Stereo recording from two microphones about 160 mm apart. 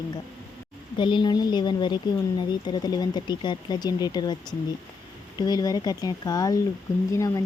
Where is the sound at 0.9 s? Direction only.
30° left (ahead or behind).